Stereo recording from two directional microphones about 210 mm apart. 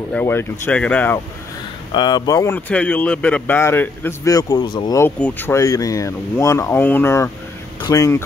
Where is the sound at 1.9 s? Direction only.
20° left (ahead or behind).